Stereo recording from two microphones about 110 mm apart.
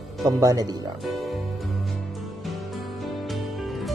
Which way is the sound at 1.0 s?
Centre (ahead or behind).